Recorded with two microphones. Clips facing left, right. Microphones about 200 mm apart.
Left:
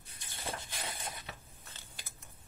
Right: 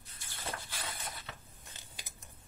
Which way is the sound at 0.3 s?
20° left (ahead or behind).